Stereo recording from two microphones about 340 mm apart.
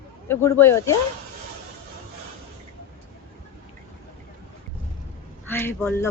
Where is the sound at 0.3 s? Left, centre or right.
Centre.